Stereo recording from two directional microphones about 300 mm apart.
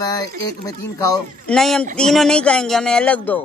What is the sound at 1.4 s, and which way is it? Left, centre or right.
Speech, centre.